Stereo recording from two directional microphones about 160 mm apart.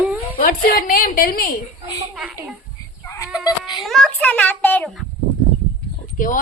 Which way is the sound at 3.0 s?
20° left (ahead or behind).